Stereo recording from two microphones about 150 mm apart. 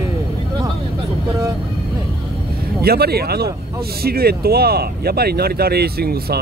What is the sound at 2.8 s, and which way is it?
Speech, 90° right.